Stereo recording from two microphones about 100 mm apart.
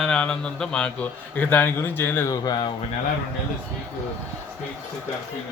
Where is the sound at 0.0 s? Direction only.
10° left (ahead or behind); by 2.3 s 25° left (ahead or behind).